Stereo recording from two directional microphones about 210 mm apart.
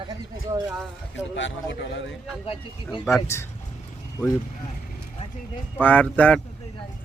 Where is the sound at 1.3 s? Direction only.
60° left (ahead or behind).